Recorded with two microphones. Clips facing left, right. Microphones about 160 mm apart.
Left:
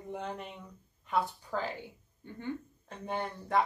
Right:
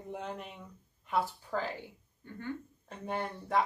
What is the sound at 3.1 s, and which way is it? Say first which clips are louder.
Speech: left 1 dB; centre (ahead or behind).